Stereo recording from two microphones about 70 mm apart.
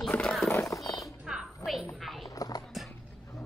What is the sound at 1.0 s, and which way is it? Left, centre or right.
Music, centre.